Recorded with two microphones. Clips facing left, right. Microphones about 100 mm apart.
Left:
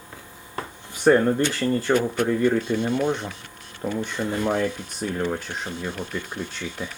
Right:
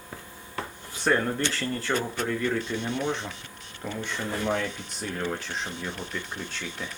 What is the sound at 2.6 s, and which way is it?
Speech, 55° left (ahead or behind).